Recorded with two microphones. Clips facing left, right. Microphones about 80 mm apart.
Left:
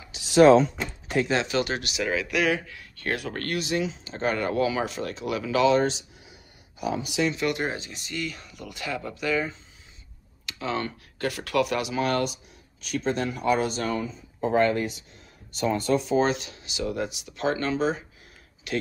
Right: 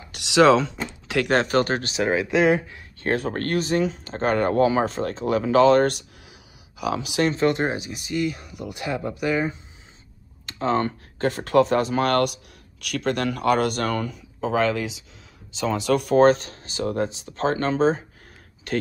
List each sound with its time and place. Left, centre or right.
0.1 s speech: right
1.0 s door: right
1.3 s speech: right
6.8 s speech: right
7.2 s speech: right
10.4 s speech: right
11.9 s speech: right